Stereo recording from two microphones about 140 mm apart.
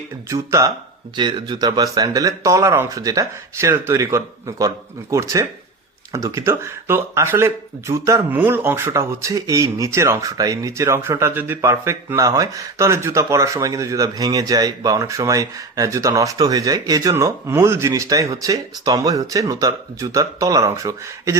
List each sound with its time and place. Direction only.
0.3 s speech: 25° right (ahead or behind)
1.1 s speech: 35° right (ahead or behind)